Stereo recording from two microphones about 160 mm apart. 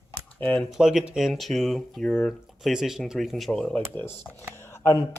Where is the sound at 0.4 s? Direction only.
10° left (ahead or behind).